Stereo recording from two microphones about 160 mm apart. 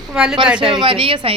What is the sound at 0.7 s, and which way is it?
Speech, 30° right (ahead or behind).